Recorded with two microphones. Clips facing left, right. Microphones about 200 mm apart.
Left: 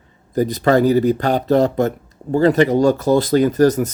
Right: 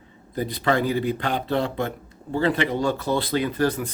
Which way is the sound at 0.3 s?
45° left (ahead or behind).